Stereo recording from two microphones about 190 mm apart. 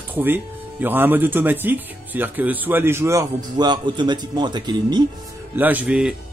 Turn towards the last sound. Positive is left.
turn(degrees=-5)  # may be behind; listen again after turning